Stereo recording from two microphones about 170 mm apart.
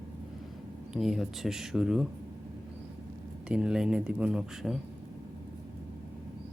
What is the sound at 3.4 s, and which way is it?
Speech, 5° right (ahead or behind).